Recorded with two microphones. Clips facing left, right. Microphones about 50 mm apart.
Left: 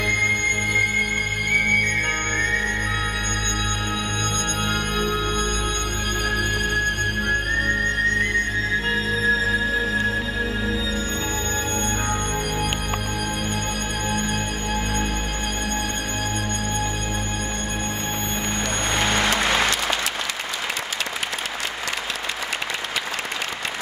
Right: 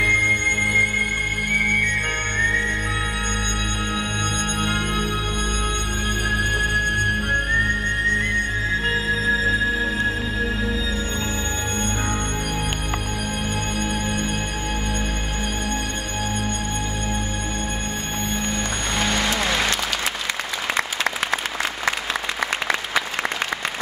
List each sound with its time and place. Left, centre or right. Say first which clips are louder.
0.0 s music: right 3 dB; centre
4.6 s music: even; centre
6.2 s music: right 2 dB; centre
9.5 s music: right 1 dB; centre
19.0 s music: left 1 dB; left
19.4 s applause: left 1 dB; centre